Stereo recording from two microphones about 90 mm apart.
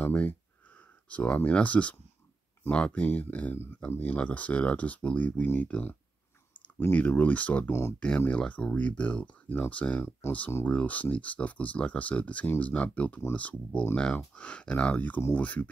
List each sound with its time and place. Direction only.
0.0 s speech: 15° left (ahead or behind)